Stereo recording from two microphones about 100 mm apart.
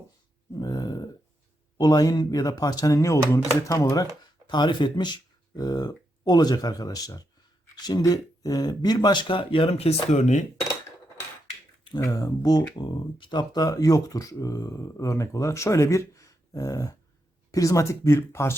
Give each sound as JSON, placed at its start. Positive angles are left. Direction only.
{"t": 0.5, "sound": "burping", "side_deg": 40}
{"t": 1.8, "sound": "speech", "side_deg": 40}
{"t": 4.4, "sound": "speech", "side_deg": 50}
{"t": 12.0, "sound": "speech", "side_deg": 35}